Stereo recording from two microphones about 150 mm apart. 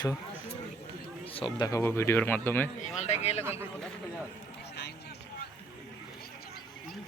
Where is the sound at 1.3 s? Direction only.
35° left (ahead or behind).